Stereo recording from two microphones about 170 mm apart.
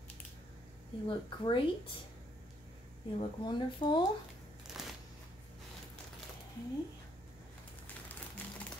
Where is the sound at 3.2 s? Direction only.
25° left (ahead or behind).